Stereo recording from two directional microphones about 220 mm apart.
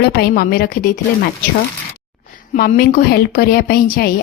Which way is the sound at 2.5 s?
40° left (ahead or behind).